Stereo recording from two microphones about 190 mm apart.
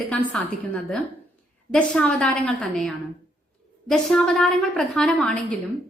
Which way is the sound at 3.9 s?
Centre (ahead or behind).